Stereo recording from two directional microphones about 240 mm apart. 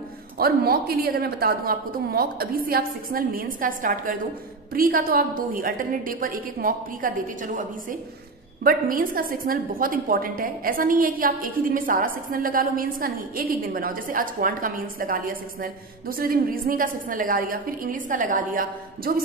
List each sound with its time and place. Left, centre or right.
0.4 s a woman's voice: right
8.6 s a woman's voice: right